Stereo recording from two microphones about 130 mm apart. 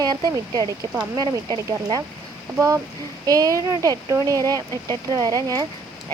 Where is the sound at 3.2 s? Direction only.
25° right (ahead or behind).